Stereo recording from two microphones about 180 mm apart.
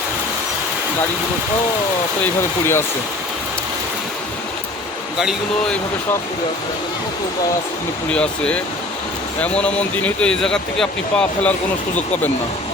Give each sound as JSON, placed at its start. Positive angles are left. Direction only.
{"t": 2.2, "sound": "speech", "side_deg": 15}
{"t": 5.2, "sound": "speech", "side_deg": 0}
{"t": 8.1, "sound": "speech", "side_deg": 5}